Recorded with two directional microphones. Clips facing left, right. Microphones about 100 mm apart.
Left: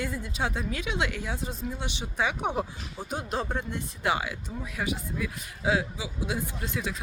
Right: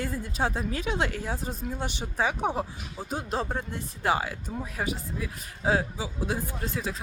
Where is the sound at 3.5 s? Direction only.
35° right (ahead or behind).